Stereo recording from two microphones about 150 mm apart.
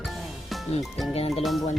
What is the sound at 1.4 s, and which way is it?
Speech, centre (ahead or behind).